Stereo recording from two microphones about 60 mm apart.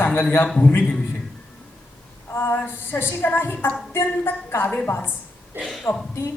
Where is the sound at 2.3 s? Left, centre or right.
Left.